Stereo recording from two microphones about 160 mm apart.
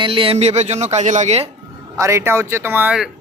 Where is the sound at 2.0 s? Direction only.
15° right (ahead or behind).